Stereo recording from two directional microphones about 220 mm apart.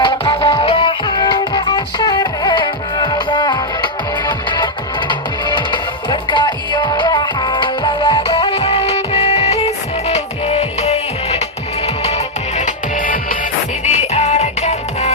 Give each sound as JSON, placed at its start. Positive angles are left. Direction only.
{"t": 0.0, "sound": "music", "side_deg": 25}